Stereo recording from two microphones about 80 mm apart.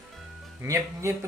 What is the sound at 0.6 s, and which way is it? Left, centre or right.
Speech, right.